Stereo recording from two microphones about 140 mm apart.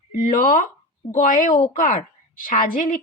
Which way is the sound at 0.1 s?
80° left.